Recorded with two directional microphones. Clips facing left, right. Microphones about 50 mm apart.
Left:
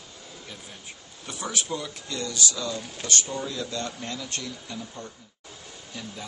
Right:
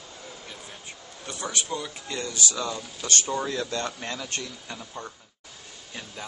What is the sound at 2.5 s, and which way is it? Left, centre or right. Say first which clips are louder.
Speech: right 1 dB; right.